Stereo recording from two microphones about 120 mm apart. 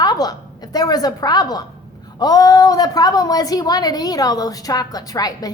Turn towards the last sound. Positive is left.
turn(degrees=30)  # may be behind; listen again after turning